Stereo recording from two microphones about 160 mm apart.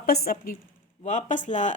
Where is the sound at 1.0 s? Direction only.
50° left (ahead or behind).